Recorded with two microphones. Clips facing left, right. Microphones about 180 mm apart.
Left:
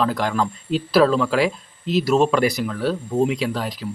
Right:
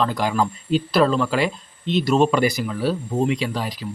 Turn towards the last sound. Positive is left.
turn(degrees=0)  # may be behind; listen again after turning